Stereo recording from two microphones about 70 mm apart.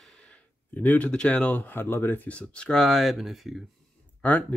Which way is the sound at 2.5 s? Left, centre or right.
Centre.